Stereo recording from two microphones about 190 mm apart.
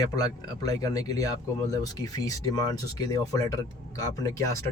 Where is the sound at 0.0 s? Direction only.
20° left (ahead or behind).